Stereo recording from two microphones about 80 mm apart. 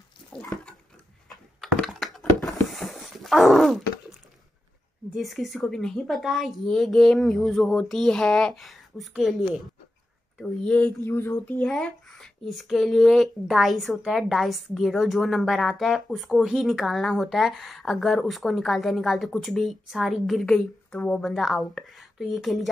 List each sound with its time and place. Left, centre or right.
1.3 s computer keyboard: centre
2.1 s dog: centre
5.1 s speech: centre
10.4 s speech: centre
11.1 s a sound: left
11.6 s speech: centre
20.4 s speech: centre